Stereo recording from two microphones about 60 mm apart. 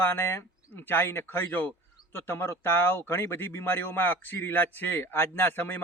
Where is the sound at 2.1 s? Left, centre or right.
Left.